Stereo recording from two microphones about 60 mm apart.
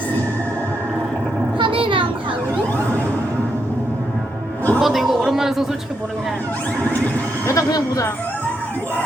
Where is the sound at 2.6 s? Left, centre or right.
Left.